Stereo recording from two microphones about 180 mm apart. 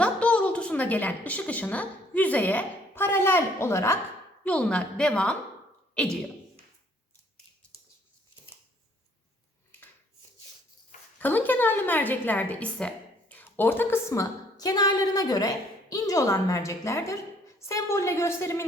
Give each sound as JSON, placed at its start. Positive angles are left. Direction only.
{"t": 0.0, "sound": "a woman's voice", "side_deg": 5}
{"t": 11.2, "sound": "a woman's voice", "side_deg": 10}